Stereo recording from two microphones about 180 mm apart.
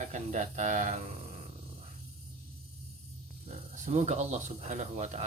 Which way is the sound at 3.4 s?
40° right (ahead or behind).